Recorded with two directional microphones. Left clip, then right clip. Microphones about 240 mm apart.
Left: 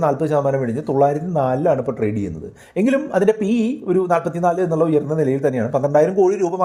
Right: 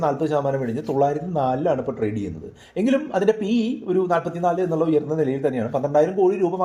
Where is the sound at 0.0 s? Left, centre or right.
Left.